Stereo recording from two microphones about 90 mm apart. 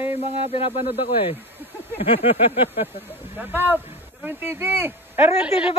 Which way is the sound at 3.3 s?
25° right (ahead or behind).